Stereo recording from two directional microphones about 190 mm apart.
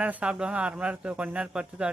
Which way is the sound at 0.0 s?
5° right (ahead or behind).